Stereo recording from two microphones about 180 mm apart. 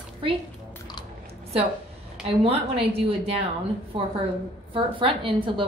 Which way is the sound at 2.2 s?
30° right (ahead or behind).